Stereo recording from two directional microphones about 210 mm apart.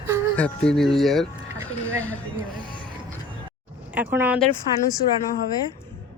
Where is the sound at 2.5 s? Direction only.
20° left (ahead or behind).